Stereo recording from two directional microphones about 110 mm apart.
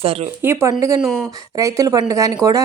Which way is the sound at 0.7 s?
30° right (ahead or behind).